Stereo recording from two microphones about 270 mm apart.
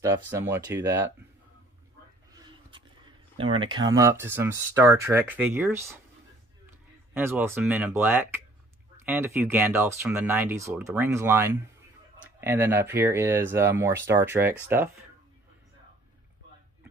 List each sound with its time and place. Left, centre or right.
0.3 s speech: centre
2.3 s a sound: centre
3.3 s speech: centre
7.2 s speech: centre